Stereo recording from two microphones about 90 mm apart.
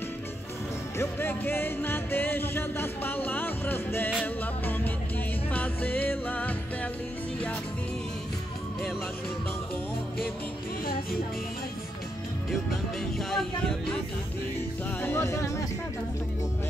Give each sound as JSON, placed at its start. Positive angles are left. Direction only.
{"t": 0.9, "sound": "music", "side_deg": 25}
{"t": 13.2, "sound": "a sound", "side_deg": 5}
{"t": 15.0, "sound": "music", "side_deg": 30}